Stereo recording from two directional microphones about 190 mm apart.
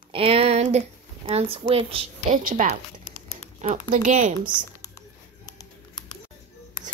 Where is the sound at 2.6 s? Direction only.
45° right (ahead or behind).